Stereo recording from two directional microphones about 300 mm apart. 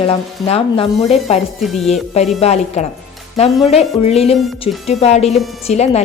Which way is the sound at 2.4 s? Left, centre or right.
Left.